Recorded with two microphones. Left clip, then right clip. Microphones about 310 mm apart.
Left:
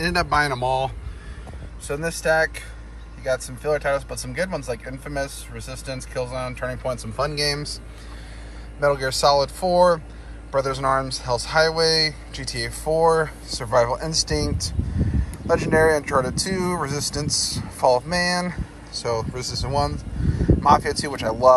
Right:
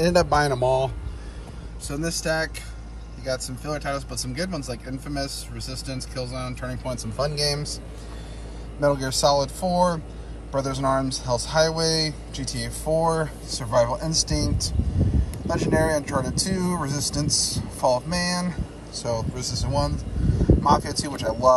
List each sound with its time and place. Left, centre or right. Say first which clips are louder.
0.0 s speech: right 1 dB; centre
1.9 s speech: left 5 dB; centre
3.6 s speech: left 9 dB; centre
5.7 s speech: left 3 dB; centre
8.8 s speech: left 2 dB; centre